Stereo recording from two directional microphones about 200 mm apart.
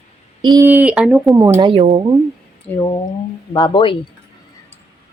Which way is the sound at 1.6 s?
30° right (ahead or behind).